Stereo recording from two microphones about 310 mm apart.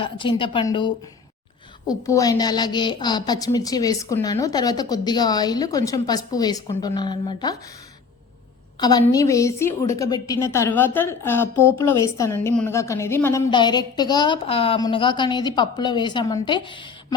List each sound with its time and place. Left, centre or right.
0.0 s a woman's voice: centre
8.8 s a woman's voice: centre